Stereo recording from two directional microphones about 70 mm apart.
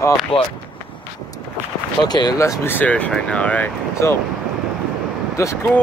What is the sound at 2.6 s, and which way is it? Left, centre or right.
Speech, left.